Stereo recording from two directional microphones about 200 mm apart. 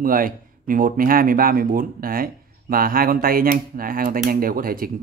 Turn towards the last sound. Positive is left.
turn(degrees=-45)  # may be behind; listen again after turning